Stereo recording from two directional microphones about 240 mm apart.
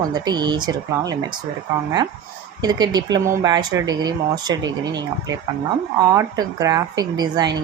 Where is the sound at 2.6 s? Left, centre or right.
Centre.